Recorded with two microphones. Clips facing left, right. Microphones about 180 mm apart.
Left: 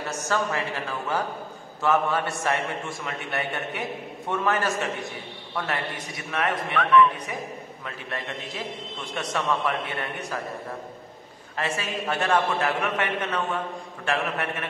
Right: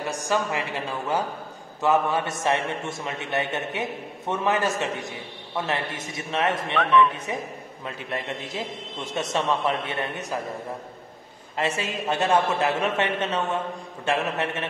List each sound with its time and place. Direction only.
0.0 s a man's voice: 15° right (ahead or behind)
7.8 s a man's voice: 20° right (ahead or behind)
11.5 s a man's voice: 20° right (ahead or behind)